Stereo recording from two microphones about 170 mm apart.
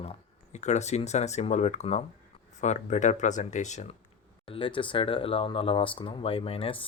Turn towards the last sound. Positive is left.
turn(degrees=30)  # may be behind; listen again after turning